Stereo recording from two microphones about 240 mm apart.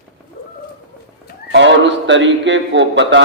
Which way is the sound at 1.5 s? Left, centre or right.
Right.